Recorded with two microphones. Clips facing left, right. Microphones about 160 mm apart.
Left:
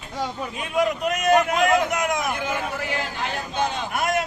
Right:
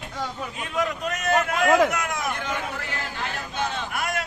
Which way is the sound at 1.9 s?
20° left (ahead or behind).